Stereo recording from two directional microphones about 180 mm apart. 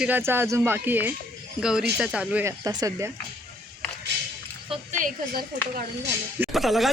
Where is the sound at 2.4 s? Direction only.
20° right (ahead or behind).